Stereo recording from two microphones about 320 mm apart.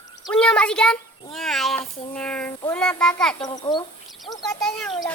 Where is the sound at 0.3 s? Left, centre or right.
Centre.